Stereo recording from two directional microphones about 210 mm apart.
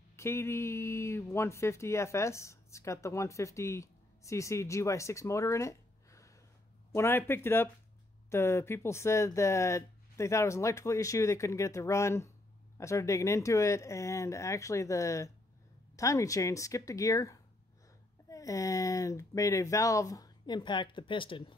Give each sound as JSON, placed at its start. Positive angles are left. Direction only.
{"t": 0.1, "sound": "speech", "side_deg": 15}